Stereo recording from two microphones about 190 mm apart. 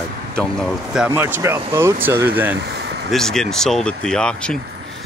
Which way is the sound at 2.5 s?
65° right (ahead or behind).